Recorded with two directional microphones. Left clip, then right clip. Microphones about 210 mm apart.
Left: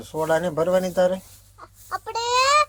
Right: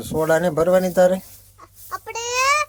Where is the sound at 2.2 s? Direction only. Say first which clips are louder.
Left 1 dB; 40° right (ahead or behind).